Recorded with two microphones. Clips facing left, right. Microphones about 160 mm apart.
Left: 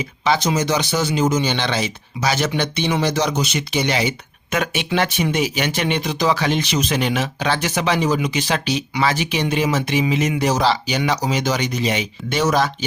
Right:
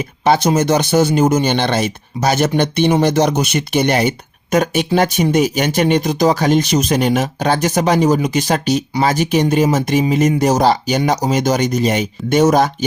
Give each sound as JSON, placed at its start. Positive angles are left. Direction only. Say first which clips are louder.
{"t": 0.0, "sound": "speech", "louder": "right 5 dB", "side_deg": -50}
{"t": 4.5, "sound": "speech", "louder": "right 6 dB", "side_deg": -40}